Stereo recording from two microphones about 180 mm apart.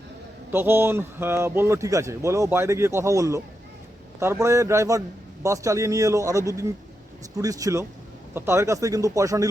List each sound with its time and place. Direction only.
0.5 s a man's voice: 10° right (ahead or behind)